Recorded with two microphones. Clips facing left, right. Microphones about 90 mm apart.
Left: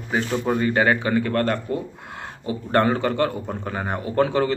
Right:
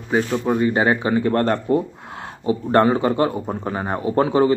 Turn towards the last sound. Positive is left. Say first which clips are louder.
# right 4 dB
turn(degrees=-20)  # may be behind; listen again after turning